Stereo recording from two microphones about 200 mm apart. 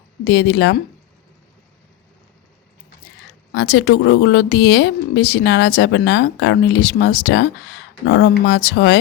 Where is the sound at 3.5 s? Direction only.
60° left (ahead or behind).